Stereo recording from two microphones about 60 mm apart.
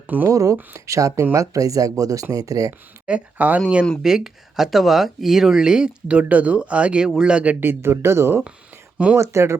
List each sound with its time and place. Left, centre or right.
0.3 s speech: right
3.1 s speech: right
4.0 s speech: centre
6.1 s speech: right
7.6 s speech: right